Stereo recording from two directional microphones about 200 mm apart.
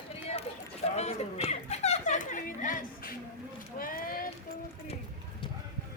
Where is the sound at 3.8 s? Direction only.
45° left (ahead or behind).